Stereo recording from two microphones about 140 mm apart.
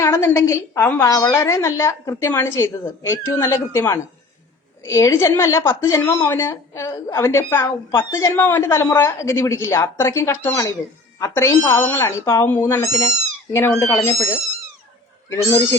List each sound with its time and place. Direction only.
0.0 s a woman's voice: 20° left (ahead or behind)